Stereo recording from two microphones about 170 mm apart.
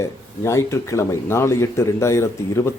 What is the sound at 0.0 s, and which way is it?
A man's voice, 15° left (ahead or behind).